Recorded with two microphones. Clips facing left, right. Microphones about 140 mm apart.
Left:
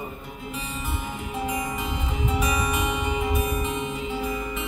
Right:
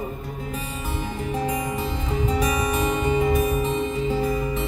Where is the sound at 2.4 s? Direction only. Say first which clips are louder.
Right 3 dB; 40° right (ahead or behind).